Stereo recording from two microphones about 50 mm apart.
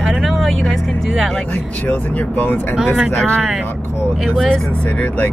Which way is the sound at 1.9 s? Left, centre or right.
Left.